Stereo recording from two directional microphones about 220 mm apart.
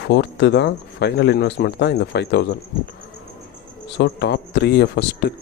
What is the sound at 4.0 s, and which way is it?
Speech, 50° left (ahead or behind).